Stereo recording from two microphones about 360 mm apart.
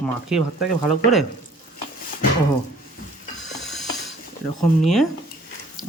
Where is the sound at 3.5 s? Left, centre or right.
Centre.